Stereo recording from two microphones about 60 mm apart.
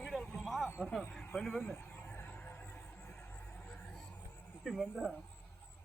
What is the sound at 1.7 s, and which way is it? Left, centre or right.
Vehicle, left.